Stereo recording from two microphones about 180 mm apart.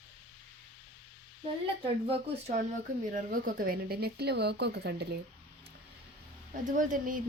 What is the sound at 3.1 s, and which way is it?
A woman's voice, 50° right (ahead or behind).